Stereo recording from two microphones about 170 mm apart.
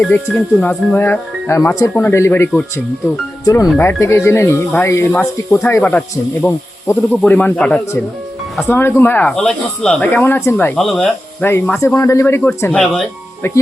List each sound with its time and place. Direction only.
0.0 s speech: 10° left (ahead or behind)
10.8 s speech: centre (ahead or behind)
11.4 s speech: 15° left (ahead or behind)
12.7 s speech: 5° left (ahead or behind)